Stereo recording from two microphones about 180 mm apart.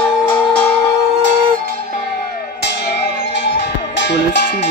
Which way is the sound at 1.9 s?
60° left (ahead or behind).